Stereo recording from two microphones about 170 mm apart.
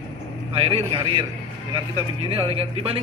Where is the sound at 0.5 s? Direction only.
35° right (ahead or behind).